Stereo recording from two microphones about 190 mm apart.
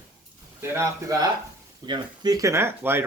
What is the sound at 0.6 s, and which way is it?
Speech, 15° right (ahead or behind).